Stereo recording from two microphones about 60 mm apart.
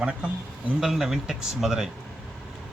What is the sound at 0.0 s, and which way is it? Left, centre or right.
Speech, centre.